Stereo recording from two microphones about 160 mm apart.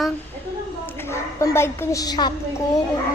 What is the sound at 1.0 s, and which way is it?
A woman's voice, 15° left (ahead or behind).